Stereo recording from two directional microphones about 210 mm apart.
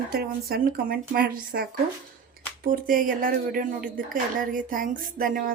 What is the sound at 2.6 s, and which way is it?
Speech, 40° right (ahead or behind).